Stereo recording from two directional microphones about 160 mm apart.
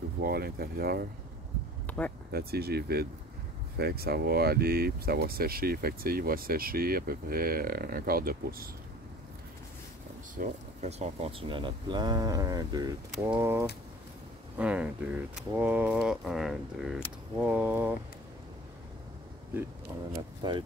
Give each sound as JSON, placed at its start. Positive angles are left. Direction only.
{"t": 0.2, "sound": "speech", "side_deg": -70}
{"t": 1.9, "sound": "speech", "side_deg": 10}
{"t": 2.3, "sound": "speech", "side_deg": -80}
{"t": 10.3, "sound": "speech", "side_deg": -50}
{"t": 20.4, "sound": "speech", "side_deg": -30}